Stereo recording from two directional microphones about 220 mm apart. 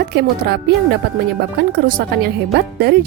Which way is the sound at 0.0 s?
50° right (ahead or behind).